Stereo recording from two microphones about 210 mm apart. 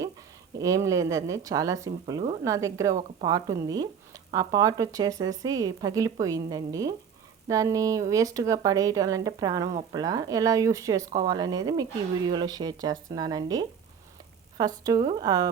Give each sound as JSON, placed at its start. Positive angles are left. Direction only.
{"t": 0.6, "sound": "speech", "side_deg": -15}
{"t": 2.9, "sound": "a woman's voice", "side_deg": -30}
{"t": 3.2, "sound": "speech", "side_deg": -15}